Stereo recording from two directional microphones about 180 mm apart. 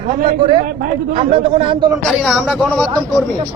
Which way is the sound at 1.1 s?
30° right (ahead or behind).